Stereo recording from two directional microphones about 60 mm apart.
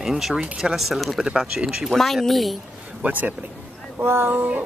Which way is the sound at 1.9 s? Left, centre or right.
Centre.